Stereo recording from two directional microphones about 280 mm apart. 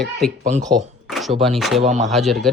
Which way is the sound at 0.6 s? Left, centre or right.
Centre.